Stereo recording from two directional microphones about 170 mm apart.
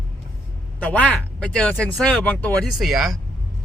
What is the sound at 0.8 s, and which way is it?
Speech, 10° left (ahead or behind).